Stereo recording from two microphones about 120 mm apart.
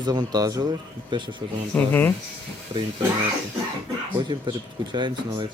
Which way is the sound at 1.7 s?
15° left (ahead or behind).